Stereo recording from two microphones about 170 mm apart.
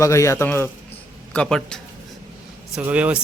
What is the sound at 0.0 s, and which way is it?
A man's voice, 20° left (ahead or behind).